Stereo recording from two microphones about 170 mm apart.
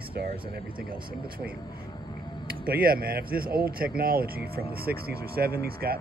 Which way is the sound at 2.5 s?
60° right (ahead or behind).